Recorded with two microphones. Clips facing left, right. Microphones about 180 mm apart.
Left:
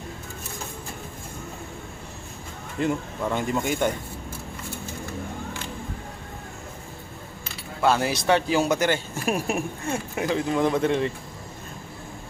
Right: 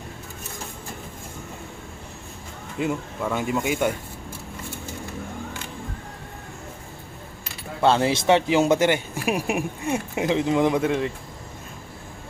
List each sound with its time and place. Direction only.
2.7 s speech: 5° right (ahead or behind)
7.8 s a man's voice: 25° right (ahead or behind)
9.1 s speech: 10° right (ahead or behind)